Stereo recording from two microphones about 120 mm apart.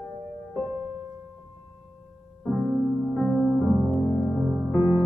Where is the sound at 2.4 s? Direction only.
5° left (ahead or behind).